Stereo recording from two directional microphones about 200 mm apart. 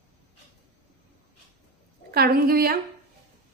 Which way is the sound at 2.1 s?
50° right (ahead or behind).